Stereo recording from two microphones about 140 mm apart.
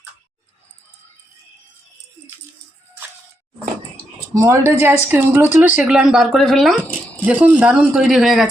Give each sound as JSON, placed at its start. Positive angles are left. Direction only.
{"t": 4.4, "sound": "speech", "side_deg": -20}
{"t": 7.3, "sound": "speech", "side_deg": -10}